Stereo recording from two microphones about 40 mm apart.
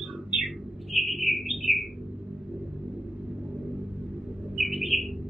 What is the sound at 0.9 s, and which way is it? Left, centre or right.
Bird, centre.